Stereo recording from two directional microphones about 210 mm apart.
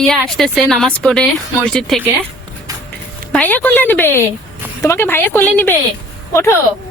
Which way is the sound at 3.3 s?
10° left (ahead or behind).